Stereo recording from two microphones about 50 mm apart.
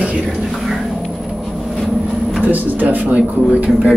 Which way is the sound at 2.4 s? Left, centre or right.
Right.